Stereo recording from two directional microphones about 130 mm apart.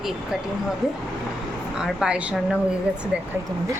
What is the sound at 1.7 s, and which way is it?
A woman's voice, 5° right (ahead or behind).